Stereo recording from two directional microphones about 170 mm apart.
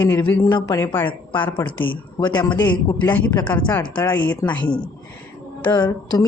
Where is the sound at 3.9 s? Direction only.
10° left (ahead or behind).